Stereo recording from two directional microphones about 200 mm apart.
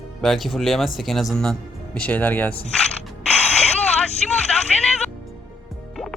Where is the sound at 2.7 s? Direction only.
5° left (ahead or behind).